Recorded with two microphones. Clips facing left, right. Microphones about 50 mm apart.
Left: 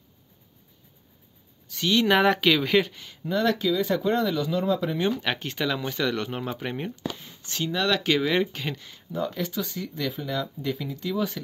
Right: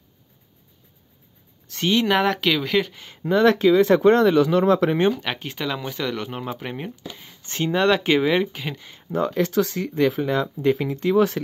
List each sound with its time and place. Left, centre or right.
2.0 s speech: centre
3.1 s speech: right
3.9 s speech: right
5.1 s speech: centre
7.4 s speech: right
8.4 s speech: centre
9.1 s speech: right